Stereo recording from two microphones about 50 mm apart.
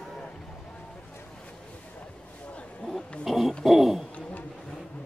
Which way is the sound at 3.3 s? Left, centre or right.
Centre.